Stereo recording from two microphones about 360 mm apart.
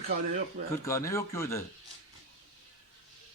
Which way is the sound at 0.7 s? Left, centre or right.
Centre.